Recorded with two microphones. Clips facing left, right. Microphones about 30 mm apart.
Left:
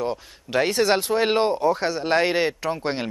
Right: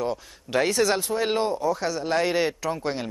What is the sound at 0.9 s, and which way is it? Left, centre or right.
A man's voice, left.